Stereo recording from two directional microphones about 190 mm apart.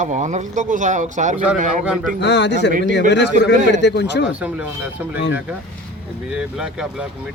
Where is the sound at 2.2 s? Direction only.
65° left (ahead or behind).